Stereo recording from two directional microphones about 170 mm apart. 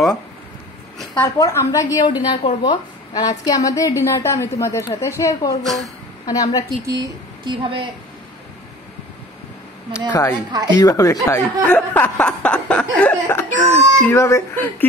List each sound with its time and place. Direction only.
1.2 s a woman's voice: 15° left (ahead or behind)
5.6 s speech: centre (ahead or behind)
6.2 s a woman's voice: 20° left (ahead or behind)
6.9 s speech: 25° right (ahead or behind)
9.9 s speech: 15° left (ahead or behind)
10.5 s speech: 25° right (ahead or behind)
10.8 s speech: 20° left (ahead or behind)